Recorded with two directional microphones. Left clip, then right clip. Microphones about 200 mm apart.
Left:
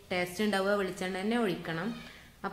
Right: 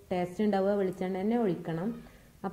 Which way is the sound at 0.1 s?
15° right (ahead or behind).